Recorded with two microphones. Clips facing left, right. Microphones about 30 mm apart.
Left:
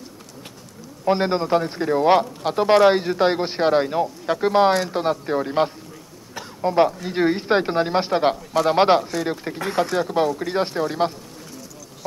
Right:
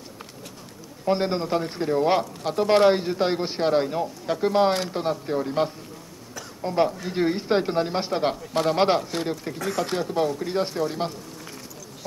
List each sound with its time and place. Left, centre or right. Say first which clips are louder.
1.0 s speech: left 4 dB; centre